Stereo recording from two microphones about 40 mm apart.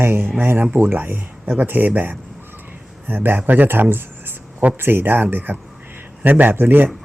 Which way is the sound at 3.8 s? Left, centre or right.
Right.